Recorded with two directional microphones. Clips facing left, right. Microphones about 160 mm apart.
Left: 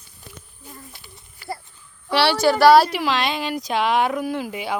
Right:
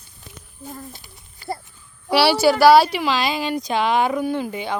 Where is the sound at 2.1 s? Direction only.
10° right (ahead or behind).